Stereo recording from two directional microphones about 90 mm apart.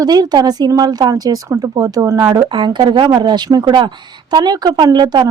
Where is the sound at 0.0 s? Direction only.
50° right (ahead or behind).